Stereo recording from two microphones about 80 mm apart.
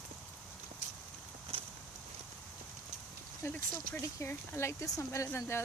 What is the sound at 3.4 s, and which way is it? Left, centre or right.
Speech, left.